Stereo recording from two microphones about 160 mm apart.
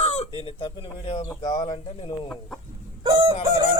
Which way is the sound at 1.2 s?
25° left (ahead or behind).